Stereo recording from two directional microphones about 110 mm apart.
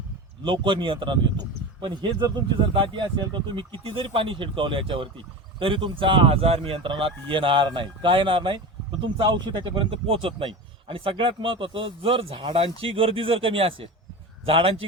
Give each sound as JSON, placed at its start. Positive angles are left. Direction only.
{"t": 0.4, "sound": "a man's voice", "side_deg": -50}